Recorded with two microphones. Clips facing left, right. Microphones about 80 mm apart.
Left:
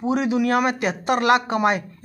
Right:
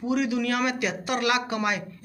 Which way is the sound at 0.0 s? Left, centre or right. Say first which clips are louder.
Left 4 dB; left.